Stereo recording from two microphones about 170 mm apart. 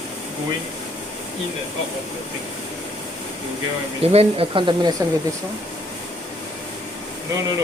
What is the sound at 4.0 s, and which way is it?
Speech, 35° right (ahead or behind).